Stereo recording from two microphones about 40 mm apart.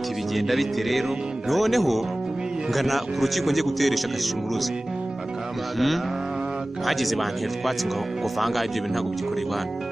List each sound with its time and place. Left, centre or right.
0.3 s a man's voice: centre
6.9 s a man's voice: centre